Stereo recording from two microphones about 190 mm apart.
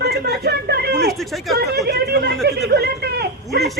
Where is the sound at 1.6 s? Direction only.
60° right (ahead or behind).